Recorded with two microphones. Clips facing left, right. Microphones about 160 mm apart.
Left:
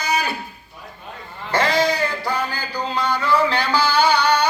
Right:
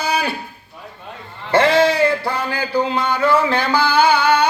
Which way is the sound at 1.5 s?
60° right (ahead or behind).